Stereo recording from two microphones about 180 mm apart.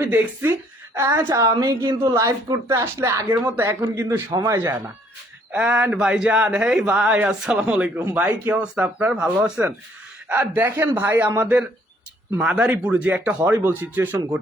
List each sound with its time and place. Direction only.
0.0 s a woman's voice: 10° right (ahead or behind)
5.5 s a woman's voice: 5° right (ahead or behind)